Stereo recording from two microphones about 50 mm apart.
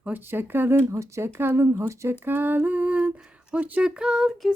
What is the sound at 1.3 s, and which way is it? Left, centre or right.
Speech, right.